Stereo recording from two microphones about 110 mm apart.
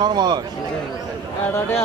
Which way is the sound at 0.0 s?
40° right (ahead or behind).